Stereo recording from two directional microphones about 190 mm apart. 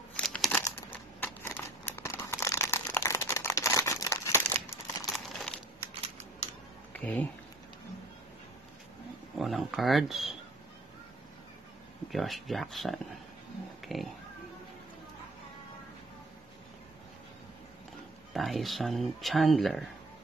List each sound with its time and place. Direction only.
0.1 s crumpling: 5° left (ahead or behind)
5.1 s crumpling: centre (ahead or behind)
5.8 s a sound: 35° right (ahead or behind)
6.9 s a sound: 10° left (ahead or behind)
9.4 s speech: centre (ahead or behind)
12.1 s speech: centre (ahead or behind)
18.3 s speech: centre (ahead or behind)